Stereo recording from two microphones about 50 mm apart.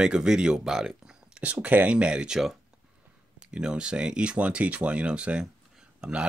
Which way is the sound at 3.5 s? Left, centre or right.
Centre.